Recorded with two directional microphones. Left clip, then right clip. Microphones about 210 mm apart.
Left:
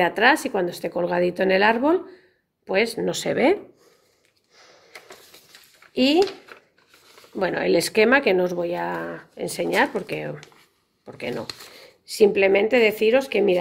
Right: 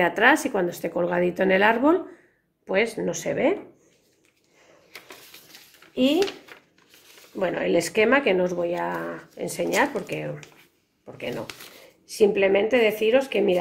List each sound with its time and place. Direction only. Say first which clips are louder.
0.0 s speech: left 1 dB; 20° left (ahead or behind); by 3.5 s 45° left (ahead or behind)
6.5 s a sound: left 2 dB; 15° left (ahead or behind)
7.3 s speech: left 2 dB; 35° left (ahead or behind)